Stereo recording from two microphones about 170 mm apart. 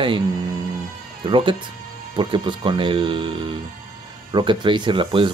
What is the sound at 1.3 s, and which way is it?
Speech, 30° right (ahead or behind).